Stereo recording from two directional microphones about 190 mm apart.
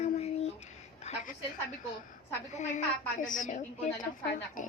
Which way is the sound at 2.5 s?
40° left (ahead or behind).